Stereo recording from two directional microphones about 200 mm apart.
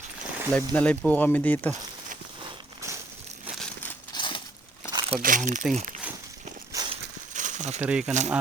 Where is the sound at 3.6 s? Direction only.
10° left (ahead or behind).